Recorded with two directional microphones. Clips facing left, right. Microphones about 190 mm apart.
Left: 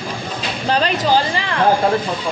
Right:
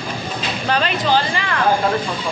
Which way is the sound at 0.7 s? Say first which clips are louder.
Left 2 dB; 35° left (ahead or behind).